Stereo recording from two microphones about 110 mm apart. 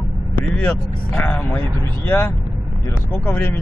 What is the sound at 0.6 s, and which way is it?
Speech, 15° left (ahead or behind).